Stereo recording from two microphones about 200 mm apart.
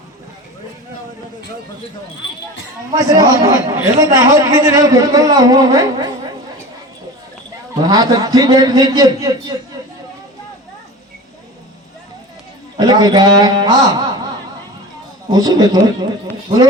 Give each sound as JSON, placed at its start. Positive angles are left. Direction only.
{"t": 2.9, "sound": "a man's voice", "side_deg": -20}
{"t": 7.8, "sound": "a man's voice", "side_deg": -20}
{"t": 12.7, "sound": "a man's voice", "side_deg": -20}
{"t": 15.3, "sound": "a man's voice", "side_deg": -20}